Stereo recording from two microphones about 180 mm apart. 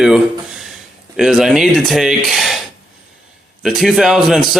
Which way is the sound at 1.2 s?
5° right (ahead or behind).